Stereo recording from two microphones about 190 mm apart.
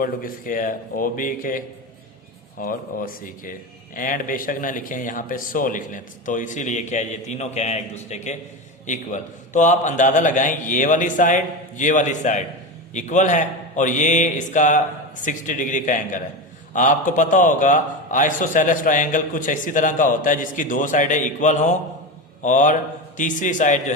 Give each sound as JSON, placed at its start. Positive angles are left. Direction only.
{"t": 0.0, "sound": "a man's voice", "side_deg": 45}